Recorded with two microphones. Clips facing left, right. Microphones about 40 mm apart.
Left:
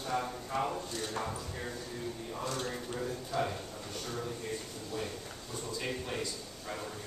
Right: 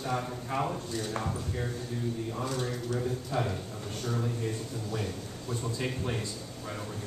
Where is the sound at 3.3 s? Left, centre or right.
Right.